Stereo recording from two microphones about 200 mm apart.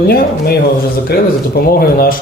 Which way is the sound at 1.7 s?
50° left (ahead or behind).